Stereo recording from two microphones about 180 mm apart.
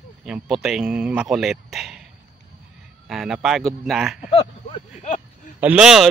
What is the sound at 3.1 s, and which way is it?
A man's voice, centre (ahead or behind).